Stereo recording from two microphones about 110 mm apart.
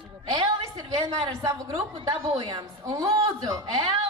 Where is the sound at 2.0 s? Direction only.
40° right (ahead or behind).